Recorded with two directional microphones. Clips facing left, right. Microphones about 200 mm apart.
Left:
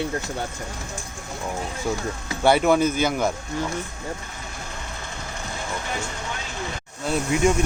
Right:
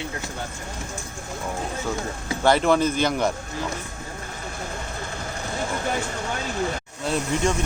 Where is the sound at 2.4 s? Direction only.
5° left (ahead or behind).